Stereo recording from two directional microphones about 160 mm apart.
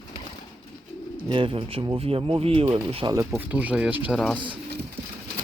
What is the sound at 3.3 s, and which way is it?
Speech, 10° right (ahead or behind).